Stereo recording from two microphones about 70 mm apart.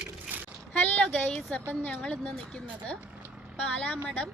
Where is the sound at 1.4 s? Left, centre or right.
Centre.